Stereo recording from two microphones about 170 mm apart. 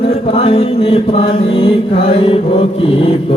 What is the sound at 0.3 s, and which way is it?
Mantra, 35° left (ahead or behind).